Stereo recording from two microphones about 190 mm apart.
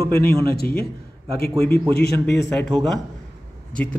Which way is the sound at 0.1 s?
55° left (ahead or behind).